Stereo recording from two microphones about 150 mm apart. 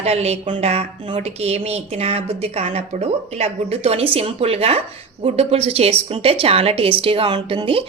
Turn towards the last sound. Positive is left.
turn(degrees=-35)  # may be behind; listen again after turning